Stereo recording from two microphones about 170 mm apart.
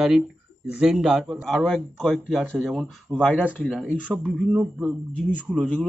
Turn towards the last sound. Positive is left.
turn(degrees=0)  # may be behind; listen again after turning